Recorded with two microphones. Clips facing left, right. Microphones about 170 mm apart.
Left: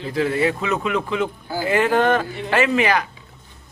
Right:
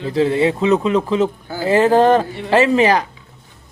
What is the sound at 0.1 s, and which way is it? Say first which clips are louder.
A woman's voice: right 4 dB; 25° right (ahead or behind).